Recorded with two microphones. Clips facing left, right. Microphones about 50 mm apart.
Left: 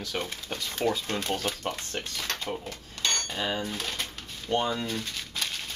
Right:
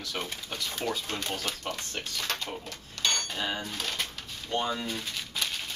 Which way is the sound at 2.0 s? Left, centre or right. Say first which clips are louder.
Even; centre.